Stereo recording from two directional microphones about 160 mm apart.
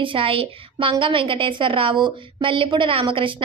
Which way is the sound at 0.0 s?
35° right (ahead or behind).